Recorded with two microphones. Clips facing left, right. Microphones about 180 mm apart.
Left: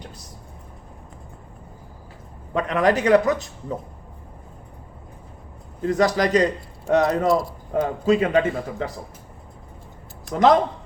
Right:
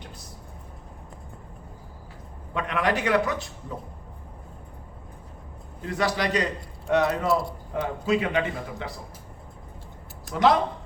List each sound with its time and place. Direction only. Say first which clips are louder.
2.5 s a man's voice: left 6 dB; 45° left (ahead or behind)
5.8 s a man's voice: left 7 dB; 40° left (ahead or behind)
10.2 s a man's voice: left 4 dB; 45° left (ahead or behind)